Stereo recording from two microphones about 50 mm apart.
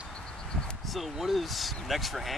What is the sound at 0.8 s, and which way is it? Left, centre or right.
Speech, centre.